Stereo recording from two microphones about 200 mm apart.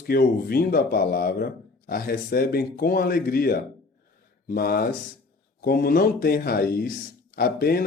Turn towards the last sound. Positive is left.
turn(degrees=50)  # may be behind; listen again after turning